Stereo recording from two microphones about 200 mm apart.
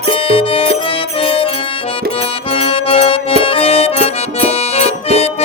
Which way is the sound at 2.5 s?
30° left (ahead or behind).